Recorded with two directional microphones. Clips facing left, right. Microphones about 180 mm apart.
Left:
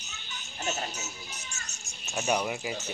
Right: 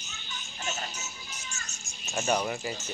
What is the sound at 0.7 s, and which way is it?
Music, 40° left (ahead or behind).